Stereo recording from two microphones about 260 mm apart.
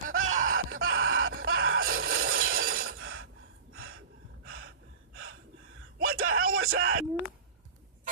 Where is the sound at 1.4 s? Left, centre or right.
Right.